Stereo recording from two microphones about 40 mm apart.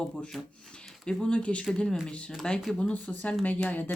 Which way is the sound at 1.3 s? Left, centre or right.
Left.